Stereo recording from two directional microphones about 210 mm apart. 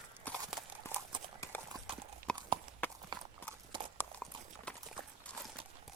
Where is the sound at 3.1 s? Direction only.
20° right (ahead or behind).